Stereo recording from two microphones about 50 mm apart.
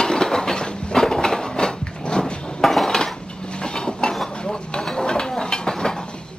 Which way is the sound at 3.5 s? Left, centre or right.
Centre.